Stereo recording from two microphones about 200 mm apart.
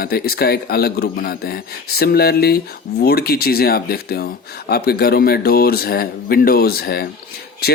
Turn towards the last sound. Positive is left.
turn(degrees=50)  # may be behind; listen again after turning